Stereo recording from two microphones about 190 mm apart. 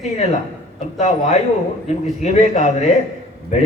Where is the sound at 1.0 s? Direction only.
35° left (ahead or behind).